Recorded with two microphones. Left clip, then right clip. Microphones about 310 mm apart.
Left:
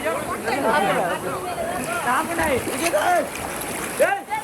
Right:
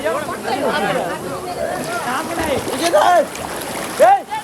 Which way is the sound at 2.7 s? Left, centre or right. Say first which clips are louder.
Right 7 dB; right.